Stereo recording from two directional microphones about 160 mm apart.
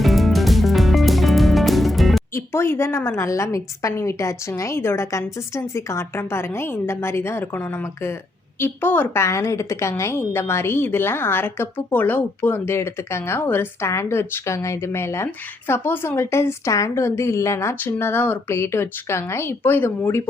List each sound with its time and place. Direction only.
0.0 s music: centre (ahead or behind)
2.3 s a woman's voice: 15° left (ahead or behind)